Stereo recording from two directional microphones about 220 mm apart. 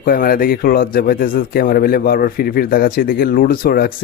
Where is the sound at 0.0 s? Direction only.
40° left (ahead or behind).